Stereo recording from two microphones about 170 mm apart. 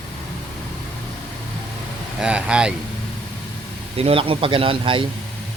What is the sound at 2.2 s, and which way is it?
Speech, 5° right (ahead or behind).